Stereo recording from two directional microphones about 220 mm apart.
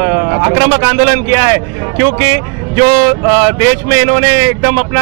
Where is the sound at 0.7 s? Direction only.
15° right (ahead or behind).